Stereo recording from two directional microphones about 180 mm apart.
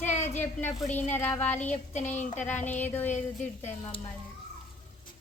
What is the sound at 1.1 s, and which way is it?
Speech, 10° left (ahead or behind).